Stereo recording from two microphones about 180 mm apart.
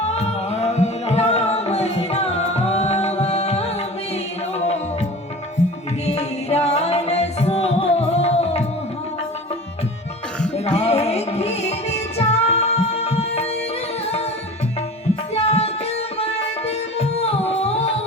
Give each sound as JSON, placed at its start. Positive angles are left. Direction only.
{"t": 0.0, "sound": "music", "side_deg": 35}
{"t": 6.1, "sound": "music", "side_deg": 35}
{"t": 10.7, "sound": "music", "side_deg": 35}
{"t": 15.4, "sound": "music", "side_deg": 35}